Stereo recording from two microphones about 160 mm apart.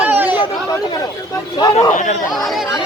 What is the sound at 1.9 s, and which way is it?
Speech, 50° left (ahead or behind).